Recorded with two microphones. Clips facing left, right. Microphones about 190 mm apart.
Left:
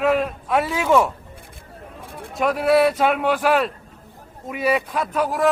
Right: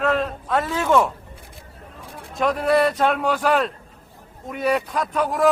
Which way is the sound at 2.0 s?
55° left (ahead or behind).